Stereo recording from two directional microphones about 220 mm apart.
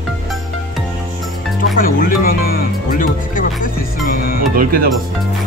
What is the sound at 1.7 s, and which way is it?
Music, 40° left (ahead or behind).